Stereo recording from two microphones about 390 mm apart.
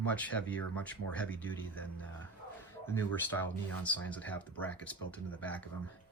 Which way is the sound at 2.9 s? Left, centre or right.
Centre.